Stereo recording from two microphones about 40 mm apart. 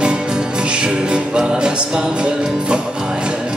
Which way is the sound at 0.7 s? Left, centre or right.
Right.